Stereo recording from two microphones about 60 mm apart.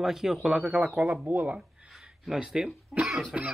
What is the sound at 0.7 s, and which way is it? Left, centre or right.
Speech, centre.